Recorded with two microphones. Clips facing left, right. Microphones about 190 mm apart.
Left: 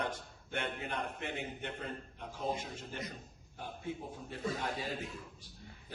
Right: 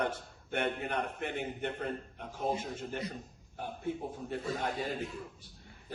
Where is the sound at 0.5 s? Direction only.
55° right (ahead or behind).